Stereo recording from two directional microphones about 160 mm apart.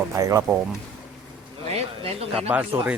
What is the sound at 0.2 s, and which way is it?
Speech, 20° right (ahead or behind).